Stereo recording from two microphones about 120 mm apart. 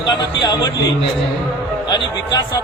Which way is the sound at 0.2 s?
35° left (ahead or behind).